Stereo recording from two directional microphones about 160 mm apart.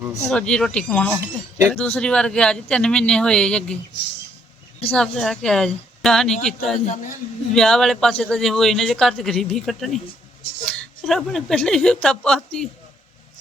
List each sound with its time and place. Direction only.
0.0 s speech: 10° right (ahead or behind)
0.3 s speech: 5° left (ahead or behind)
1.2 s speech: 15° right (ahead or behind)
1.7 s speech: 5° left (ahead or behind)
4.9 s speech: 5° left (ahead or behind)